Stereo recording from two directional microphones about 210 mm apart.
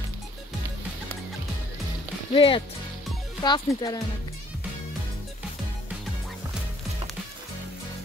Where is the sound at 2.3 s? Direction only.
25° left (ahead or behind).